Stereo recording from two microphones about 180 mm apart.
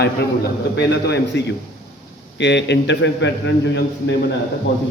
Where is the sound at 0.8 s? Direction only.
70° left (ahead or behind).